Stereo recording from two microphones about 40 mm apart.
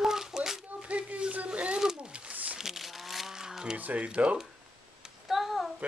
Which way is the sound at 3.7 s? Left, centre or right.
Right.